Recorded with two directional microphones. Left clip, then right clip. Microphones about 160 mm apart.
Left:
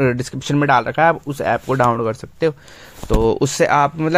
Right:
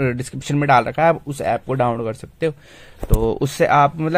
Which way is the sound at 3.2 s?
35° left (ahead or behind).